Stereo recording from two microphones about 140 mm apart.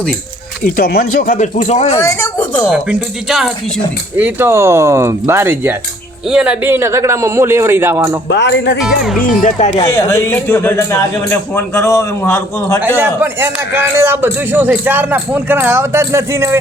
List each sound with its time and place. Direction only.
0.6 s speech: 90° left; by 2.0 s 50° left (ahead or behind)
2.0 s a woman's voice: 20° left (ahead or behind)
2.7 s speech: 5° right (ahead or behind)
4.2 s a man's voice: 15° right (ahead or behind)
8.8 s speech: centre (ahead or behind)
9.2 s speech: 70° left (ahead or behind)
9.8 s a man's voice: 20° left (ahead or behind)
13.0 s a man's voice: 15° right (ahead or behind)